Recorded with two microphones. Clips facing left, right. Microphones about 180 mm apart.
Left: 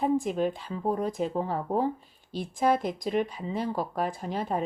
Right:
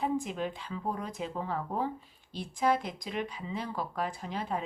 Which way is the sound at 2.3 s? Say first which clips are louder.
Left 4 dB; 45° left (ahead or behind).